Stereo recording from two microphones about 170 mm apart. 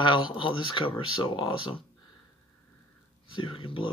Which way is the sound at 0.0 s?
25° left (ahead or behind).